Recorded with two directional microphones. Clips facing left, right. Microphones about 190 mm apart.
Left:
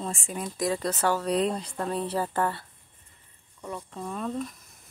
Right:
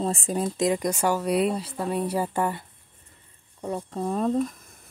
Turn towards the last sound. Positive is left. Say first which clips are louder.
# right 8 dB
turn(degrees=-40)  # may be behind; listen again after turning